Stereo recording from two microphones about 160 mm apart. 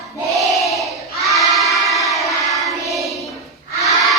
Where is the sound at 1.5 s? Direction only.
Centre (ahead or behind).